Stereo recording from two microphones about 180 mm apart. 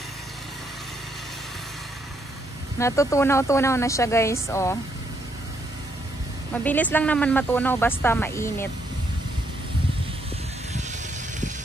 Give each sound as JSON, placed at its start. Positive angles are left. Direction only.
{"t": 2.8, "sound": "speech", "side_deg": 15}
{"t": 6.5, "sound": "speech", "side_deg": 10}